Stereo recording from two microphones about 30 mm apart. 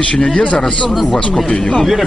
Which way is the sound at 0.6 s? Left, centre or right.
Left.